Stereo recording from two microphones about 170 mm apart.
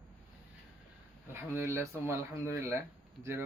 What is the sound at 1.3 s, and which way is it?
Speech, 15° right (ahead or behind).